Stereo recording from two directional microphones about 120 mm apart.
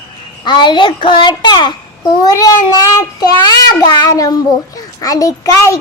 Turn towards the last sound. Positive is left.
turn(degrees=25)  # may be behind; listen again after turning